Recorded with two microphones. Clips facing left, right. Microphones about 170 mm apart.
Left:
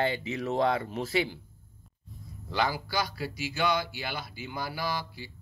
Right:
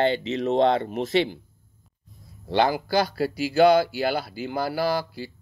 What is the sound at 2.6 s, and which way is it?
Speech, 50° right (ahead or behind).